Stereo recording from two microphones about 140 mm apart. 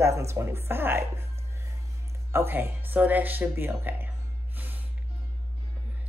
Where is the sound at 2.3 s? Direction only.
15° right (ahead or behind).